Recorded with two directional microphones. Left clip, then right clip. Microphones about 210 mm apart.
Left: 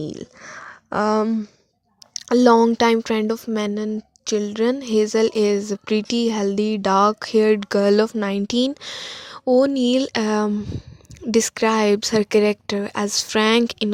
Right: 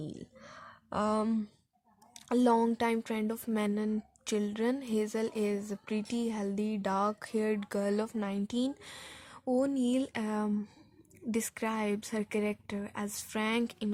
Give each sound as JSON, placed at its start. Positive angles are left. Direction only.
{"t": 0.0, "sound": "speech", "side_deg": 40}
{"t": 3.4, "sound": "speech", "side_deg": 25}